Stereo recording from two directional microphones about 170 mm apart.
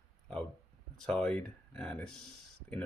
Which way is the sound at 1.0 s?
5° left (ahead or behind).